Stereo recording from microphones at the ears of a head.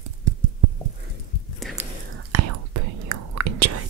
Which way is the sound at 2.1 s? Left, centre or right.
Right.